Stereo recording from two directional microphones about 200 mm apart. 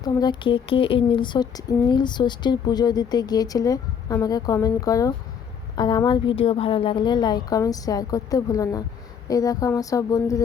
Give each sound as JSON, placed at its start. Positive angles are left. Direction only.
{"t": 0.0, "sound": "speech", "side_deg": 20}